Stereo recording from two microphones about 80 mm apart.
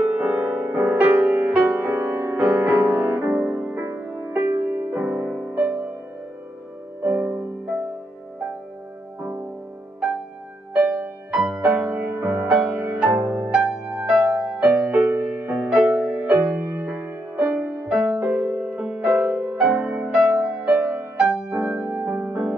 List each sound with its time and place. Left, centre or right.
0.0 s music: centre
7.0 s music: right
11.0 s music: centre
18.5 s music: centre